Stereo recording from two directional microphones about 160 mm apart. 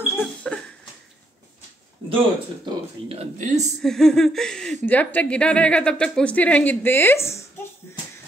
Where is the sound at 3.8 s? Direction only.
5° left (ahead or behind).